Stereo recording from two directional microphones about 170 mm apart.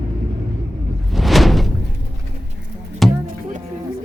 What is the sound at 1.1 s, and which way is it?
Door, centre (ahead or behind).